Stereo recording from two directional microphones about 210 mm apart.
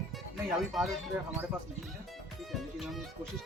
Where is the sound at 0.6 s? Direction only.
Centre (ahead or behind).